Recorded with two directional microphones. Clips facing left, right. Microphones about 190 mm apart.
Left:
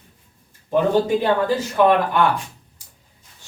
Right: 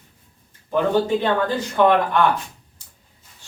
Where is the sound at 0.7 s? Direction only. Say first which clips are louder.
Left 1 dB; 10° left (ahead or behind).